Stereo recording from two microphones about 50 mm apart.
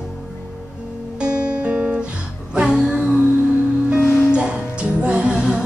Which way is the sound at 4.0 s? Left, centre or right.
Left.